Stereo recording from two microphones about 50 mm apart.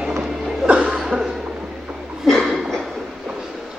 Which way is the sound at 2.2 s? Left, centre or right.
Centre.